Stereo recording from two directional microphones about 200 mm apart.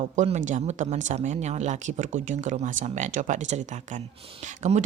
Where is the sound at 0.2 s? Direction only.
35° right (ahead or behind).